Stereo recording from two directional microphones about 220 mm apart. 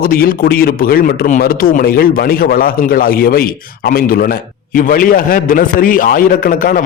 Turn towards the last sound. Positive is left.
turn(degrees=40)  # may be behind; listen again after turning